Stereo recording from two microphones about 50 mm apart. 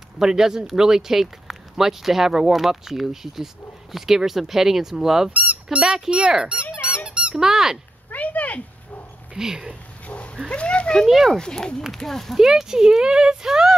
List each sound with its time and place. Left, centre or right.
0.2 s speech: centre
5.3 s squeak: right
6.0 s speech: centre
7.3 s speech: centre
8.1 s dog: left
9.4 s speech: centre
10.0 s dog: left
10.5 s speech: left
11.1 s speech: centre
11.3 s speech: centre
12.4 s speech: centre